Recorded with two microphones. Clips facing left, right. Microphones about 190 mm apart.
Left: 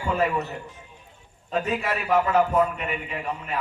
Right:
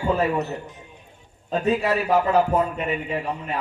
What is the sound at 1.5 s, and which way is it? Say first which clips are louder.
A man's voice: right 5 dB; 35° right (ahead or behind).